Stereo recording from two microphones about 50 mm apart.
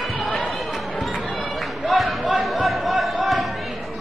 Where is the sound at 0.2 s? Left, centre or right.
Centre.